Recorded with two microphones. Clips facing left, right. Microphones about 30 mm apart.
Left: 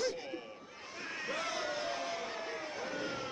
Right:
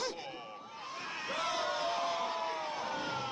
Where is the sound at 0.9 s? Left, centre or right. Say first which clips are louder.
Right 1 dB; centre.